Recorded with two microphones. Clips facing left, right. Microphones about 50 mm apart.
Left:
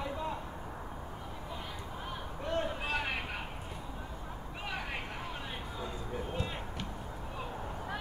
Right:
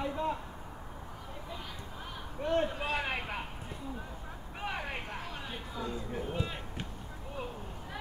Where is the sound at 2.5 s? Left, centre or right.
Right.